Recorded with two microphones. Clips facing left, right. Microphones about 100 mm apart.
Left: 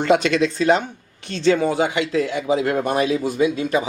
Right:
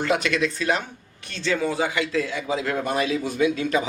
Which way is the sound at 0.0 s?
25° left (ahead or behind).